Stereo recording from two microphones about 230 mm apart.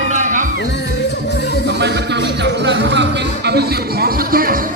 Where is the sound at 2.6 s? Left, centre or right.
Right.